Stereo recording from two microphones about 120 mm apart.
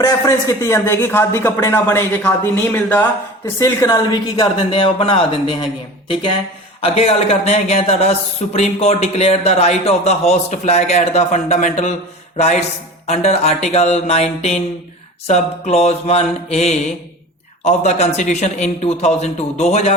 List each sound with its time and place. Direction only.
0.0 s a man's voice: 30° left (ahead or behind); by 5.6 s 45° left (ahead or behind)
6.8 s speech: 55° left (ahead or behind); by 11.9 s 75° left (ahead or behind)
12.4 s a man's voice: 65° left (ahead or behind)